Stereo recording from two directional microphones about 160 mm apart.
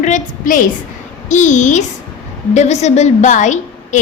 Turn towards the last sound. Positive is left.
turn(degrees=50)  # may be behind; listen again after turning